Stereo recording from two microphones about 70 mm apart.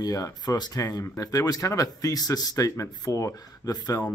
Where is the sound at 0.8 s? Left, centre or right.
Left.